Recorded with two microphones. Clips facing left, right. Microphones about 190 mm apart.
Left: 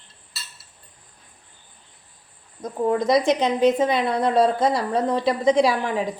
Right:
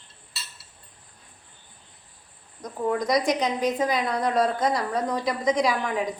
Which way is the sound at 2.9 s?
25° left (ahead or behind).